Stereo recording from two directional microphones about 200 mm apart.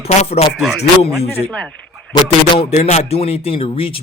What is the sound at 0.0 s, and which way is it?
Speech, 30° left (ahead or behind).